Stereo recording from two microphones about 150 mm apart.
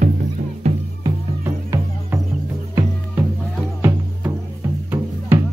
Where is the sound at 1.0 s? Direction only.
20° right (ahead or behind).